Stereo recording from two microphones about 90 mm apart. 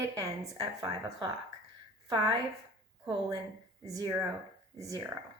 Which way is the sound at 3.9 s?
40° right (ahead or behind).